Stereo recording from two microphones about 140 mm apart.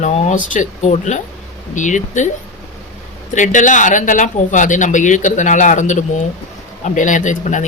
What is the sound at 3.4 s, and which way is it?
Speech, 65° left (ahead or behind).